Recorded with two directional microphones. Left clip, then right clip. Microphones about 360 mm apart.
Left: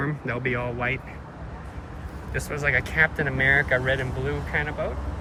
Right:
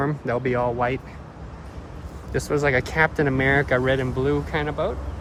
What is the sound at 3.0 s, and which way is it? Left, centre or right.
Speech, right.